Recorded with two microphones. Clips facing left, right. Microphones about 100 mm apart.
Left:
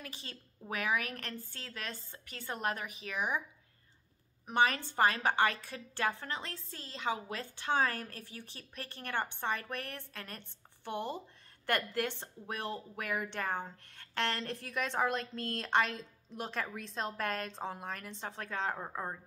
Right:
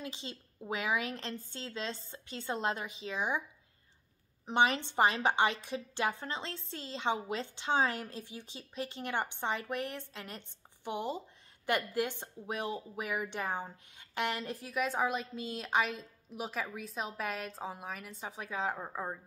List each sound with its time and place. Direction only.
0.0 s a woman's voice: 20° right (ahead or behind)
4.5 s a woman's voice: 20° right (ahead or behind); by 19.1 s centre (ahead or behind)